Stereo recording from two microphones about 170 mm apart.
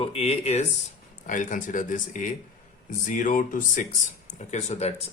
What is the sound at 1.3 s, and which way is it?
Speech, 50° left (ahead or behind).